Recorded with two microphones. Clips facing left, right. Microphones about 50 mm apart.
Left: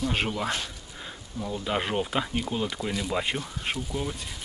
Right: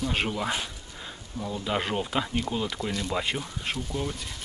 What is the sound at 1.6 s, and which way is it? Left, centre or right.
Speech, centre.